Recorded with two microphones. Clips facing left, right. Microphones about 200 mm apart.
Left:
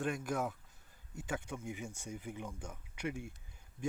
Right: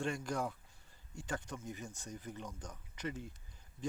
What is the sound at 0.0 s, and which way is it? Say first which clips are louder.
Speech: left 1 dB; 5° left (ahead or behind).